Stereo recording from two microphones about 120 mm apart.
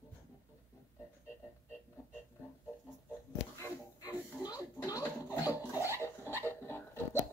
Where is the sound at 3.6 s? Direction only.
30° left (ahead or behind).